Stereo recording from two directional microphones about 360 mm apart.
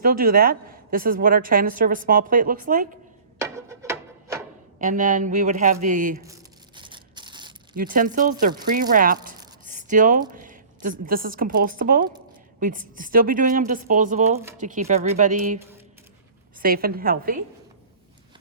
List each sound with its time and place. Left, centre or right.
0.0 s a woman's voice: right
3.3 s a sound: centre
4.8 s a woman's voice: right
6.7 s a sound: centre
7.8 s a woman's voice: right
16.6 s a woman's voice: right